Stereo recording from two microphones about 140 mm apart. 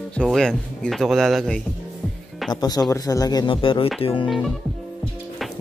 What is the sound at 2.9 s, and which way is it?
Speech, 25° left (ahead or behind).